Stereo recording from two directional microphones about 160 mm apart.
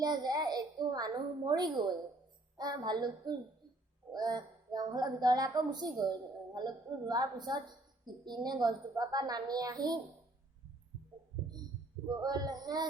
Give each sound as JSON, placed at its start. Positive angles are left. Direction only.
{"t": 0.0, "sound": "a woman's voice", "side_deg": -25}
{"t": 12.0, "sound": "a woman's voice", "side_deg": -25}